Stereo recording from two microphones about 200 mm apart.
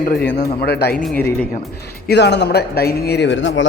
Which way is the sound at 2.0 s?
60° left (ahead or behind).